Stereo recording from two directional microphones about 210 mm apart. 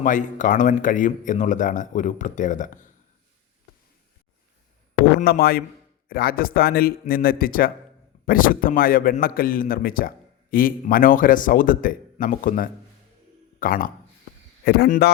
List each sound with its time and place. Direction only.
0.0 s speech: 35° left (ahead or behind)
5.2 s a man's voice: 45° left (ahead or behind)